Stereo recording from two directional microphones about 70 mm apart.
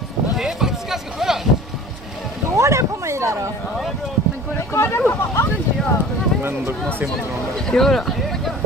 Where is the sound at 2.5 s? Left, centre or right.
Right.